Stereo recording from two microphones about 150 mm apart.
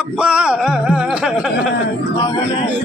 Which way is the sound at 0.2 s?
5° right (ahead or behind).